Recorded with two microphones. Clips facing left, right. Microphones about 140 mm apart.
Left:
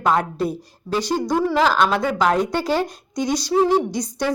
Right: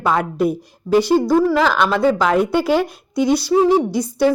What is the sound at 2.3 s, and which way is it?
Speech, 10° right (ahead or behind).